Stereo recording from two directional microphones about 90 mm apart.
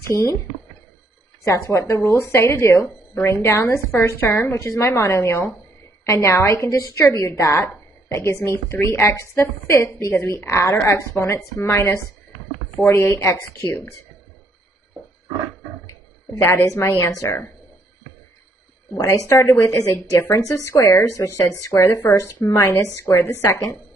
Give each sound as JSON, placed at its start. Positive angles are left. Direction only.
{"t": 1.4, "sound": "a woman's voice", "side_deg": 30}
{"t": 16.3, "sound": "speech", "side_deg": 25}
{"t": 19.0, "sound": "a woman's voice", "side_deg": 30}